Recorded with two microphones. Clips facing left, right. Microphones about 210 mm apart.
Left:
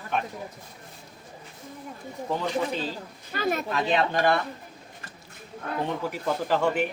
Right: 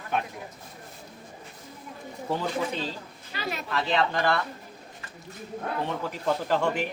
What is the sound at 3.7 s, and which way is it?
Speech, 20° left (ahead or behind).